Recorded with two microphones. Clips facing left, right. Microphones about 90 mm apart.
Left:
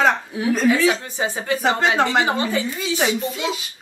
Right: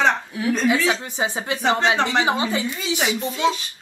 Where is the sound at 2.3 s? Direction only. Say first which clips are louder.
Even; 15° right (ahead or behind).